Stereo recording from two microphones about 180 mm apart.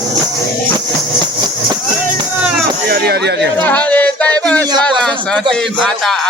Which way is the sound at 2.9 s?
65° right (ahead or behind).